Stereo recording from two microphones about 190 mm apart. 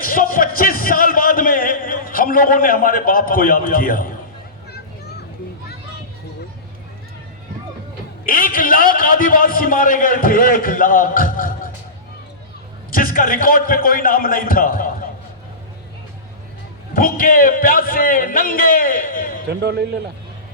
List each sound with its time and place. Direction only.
0.0 s a sound: 50° left (ahead or behind)
8.2 s a man's voice: 45° left (ahead or behind)
12.9 s a man's voice: 45° left (ahead or behind)
16.9 s a man's voice: 50° left (ahead or behind)
19.5 s a man's voice: 60° right (ahead or behind)